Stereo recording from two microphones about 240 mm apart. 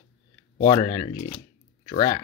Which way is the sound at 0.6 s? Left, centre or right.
Centre.